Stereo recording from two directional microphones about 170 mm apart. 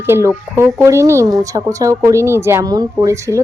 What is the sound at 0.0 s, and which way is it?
Speech, 15° right (ahead or behind).